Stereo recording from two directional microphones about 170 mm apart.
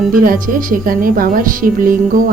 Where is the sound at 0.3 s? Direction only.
55° right (ahead or behind).